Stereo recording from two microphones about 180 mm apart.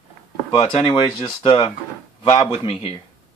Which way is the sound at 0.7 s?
25° left (ahead or behind).